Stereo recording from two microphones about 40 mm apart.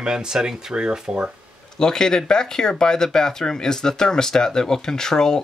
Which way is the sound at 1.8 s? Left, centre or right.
Centre.